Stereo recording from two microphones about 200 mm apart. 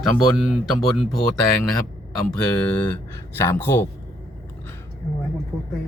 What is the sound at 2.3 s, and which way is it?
Speech, 5° left (ahead or behind).